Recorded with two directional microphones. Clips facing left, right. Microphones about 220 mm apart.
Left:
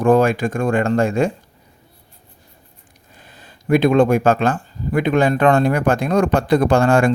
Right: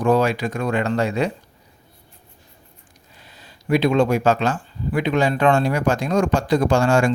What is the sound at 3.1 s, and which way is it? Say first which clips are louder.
Speech: left 3 dB; 50° left (ahead or behind).